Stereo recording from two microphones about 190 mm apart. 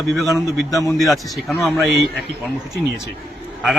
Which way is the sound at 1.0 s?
Centre (ahead or behind).